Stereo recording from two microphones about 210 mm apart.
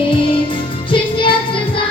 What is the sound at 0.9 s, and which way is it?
Music, 25° left (ahead or behind).